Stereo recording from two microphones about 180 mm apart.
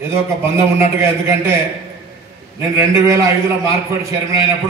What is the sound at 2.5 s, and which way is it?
Speech, 15° right (ahead or behind).